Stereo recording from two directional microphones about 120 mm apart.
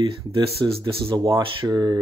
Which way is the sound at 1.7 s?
35° right (ahead or behind).